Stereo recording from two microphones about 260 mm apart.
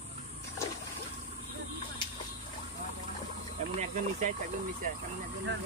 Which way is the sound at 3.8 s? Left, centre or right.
Right.